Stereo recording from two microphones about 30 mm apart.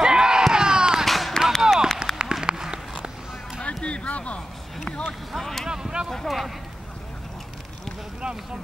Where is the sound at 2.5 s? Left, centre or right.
Centre.